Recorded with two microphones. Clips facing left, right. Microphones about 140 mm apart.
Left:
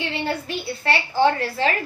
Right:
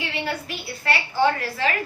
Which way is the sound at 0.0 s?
25° left (ahead or behind).